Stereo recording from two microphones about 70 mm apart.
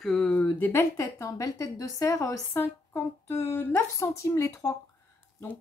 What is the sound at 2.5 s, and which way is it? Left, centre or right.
Speech, left.